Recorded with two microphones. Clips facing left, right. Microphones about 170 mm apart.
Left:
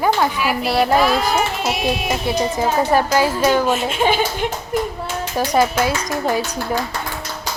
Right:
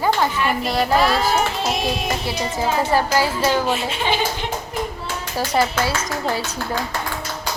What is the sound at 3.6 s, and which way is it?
Speech, 45° left (ahead or behind).